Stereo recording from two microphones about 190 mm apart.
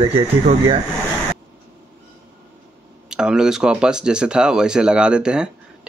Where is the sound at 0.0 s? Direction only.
30° right (ahead or behind).